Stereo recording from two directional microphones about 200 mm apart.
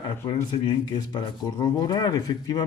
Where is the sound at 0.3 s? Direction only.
20° left (ahead or behind).